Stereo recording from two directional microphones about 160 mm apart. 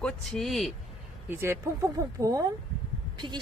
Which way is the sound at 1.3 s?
15° right (ahead or behind).